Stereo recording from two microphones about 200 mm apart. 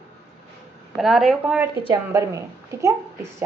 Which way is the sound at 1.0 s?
Centre (ahead or behind).